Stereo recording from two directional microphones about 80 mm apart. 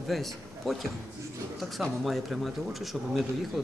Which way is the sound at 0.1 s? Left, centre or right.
Centre.